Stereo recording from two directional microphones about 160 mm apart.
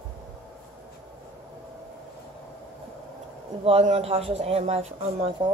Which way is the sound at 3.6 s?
40° right (ahead or behind).